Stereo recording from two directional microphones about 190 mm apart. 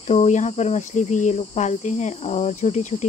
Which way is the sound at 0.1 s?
35° left (ahead or behind).